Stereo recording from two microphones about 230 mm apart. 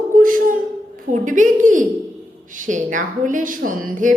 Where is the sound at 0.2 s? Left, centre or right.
Right.